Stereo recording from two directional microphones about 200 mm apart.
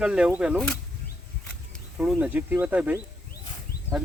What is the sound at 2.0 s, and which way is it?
Speech, 5° right (ahead or behind).